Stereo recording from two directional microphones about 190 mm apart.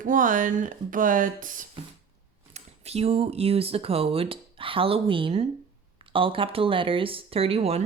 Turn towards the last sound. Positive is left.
turn(degrees=-30)  # may be behind; listen again after turning